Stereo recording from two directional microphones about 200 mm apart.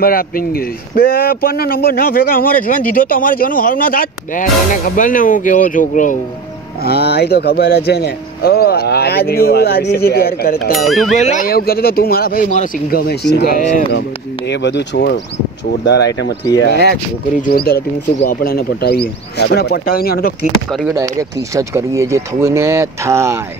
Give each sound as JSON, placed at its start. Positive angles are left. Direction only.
{"t": 0.0, "sound": "speech", "side_deg": 45}
{"t": 6.8, "sound": "speech", "side_deg": 50}
{"t": 10.9, "sound": "speech", "side_deg": 0}
{"t": 11.1, "sound": "speech", "side_deg": 40}
{"t": 20.9, "sound": "speech", "side_deg": -15}